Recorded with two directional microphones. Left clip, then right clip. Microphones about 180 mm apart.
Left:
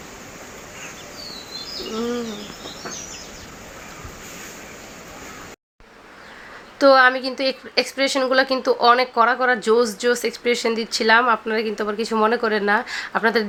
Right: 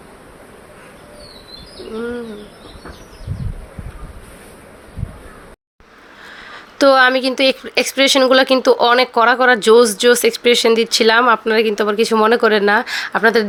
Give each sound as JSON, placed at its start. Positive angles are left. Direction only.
{"t": 6.7, "sound": "speech", "side_deg": -40}